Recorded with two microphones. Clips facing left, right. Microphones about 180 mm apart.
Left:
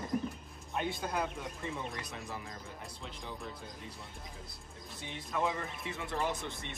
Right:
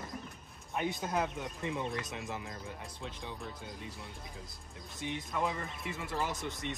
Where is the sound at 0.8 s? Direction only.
20° right (ahead or behind).